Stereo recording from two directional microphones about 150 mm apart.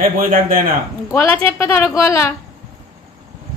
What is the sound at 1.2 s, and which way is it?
A woman's voice, 15° left (ahead or behind).